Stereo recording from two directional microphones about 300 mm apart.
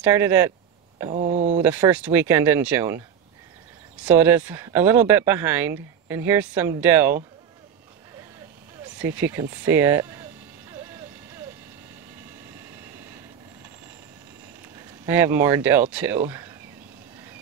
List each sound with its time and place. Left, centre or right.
0.0 s speech: centre
1.1 s speech: right
1.6 s speech: centre
4.0 s speech: centre
8.9 s speech: centre
15.0 s speech: centre